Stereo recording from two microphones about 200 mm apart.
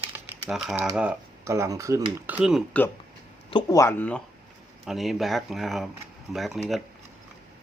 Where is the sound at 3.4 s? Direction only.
20° left (ahead or behind); by 6.6 s centre (ahead or behind).